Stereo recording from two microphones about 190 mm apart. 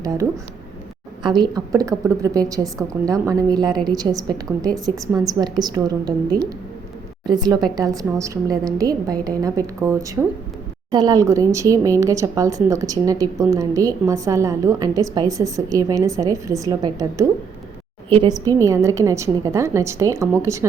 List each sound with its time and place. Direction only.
0.0 s a woman's voice: 20° right (ahead or behind)